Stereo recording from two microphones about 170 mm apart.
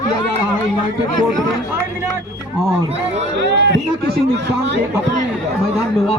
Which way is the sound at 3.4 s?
90° right.